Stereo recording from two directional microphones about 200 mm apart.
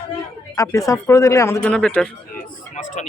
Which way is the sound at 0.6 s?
15° left (ahead or behind).